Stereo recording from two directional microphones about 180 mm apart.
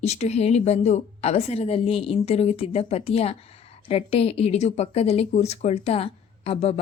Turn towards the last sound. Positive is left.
turn(degrees=35)  # may be behind; listen again after turning